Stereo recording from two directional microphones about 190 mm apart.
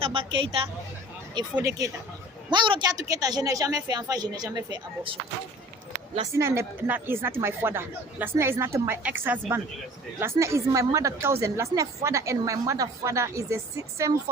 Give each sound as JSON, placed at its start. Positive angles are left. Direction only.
{"t": 0.0, "sound": "a woman's voice", "side_deg": -30}
{"t": 1.5, "sound": "a woman's voice", "side_deg": -15}
{"t": 6.3, "sound": "a woman's voice", "side_deg": -15}